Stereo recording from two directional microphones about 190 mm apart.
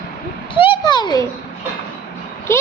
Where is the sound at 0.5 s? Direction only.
25° left (ahead or behind).